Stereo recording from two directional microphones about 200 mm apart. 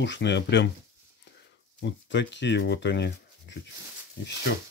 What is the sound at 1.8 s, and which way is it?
Speech, 60° left (ahead or behind).